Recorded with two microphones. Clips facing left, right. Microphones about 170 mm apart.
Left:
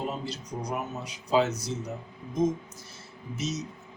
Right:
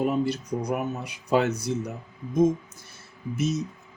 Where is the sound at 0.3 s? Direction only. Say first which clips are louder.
Right 7 dB; 60° right (ahead or behind).